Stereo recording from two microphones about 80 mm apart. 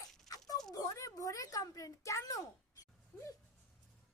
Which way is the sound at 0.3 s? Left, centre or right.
Left.